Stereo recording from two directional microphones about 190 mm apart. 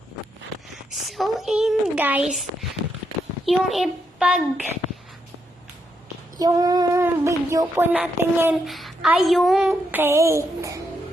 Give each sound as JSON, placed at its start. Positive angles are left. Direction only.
{"t": 0.9, "sound": "a sound", "side_deg": 0}
{"t": 3.4, "sound": "a child's voice", "side_deg": 0}
{"t": 6.4, "sound": "speech", "side_deg": -20}
{"t": 8.6, "sound": "a woman's voice", "side_deg": 0}